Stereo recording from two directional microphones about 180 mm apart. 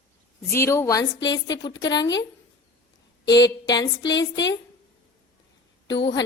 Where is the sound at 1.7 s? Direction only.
80° left.